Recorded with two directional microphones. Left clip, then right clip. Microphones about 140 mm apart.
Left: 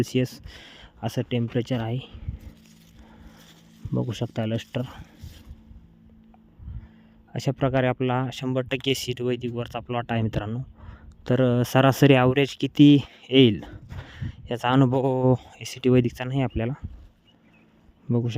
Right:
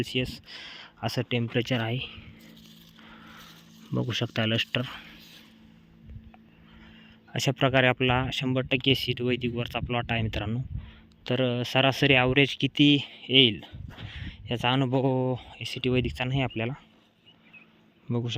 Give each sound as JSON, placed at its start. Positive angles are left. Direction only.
{"t": 0.2, "sound": "speech", "side_deg": 55}
{"t": 1.5, "sound": "speech", "side_deg": 25}
{"t": 3.1, "sound": "a sound", "side_deg": 15}
{"t": 3.9, "sound": "speech", "side_deg": 20}
{"t": 7.3, "sound": "speech", "side_deg": 20}
{"t": 8.3, "sound": "speech", "side_deg": 40}
{"t": 8.5, "sound": "speech", "side_deg": 70}
{"t": 9.2, "sound": "speech", "side_deg": 45}
{"t": 11.2, "sound": "speech", "side_deg": 60}
{"t": 14.2, "sound": "speech", "side_deg": 40}
{"t": 16.1, "sound": "speech", "side_deg": 40}
{"t": 18.1, "sound": "speech", "side_deg": 50}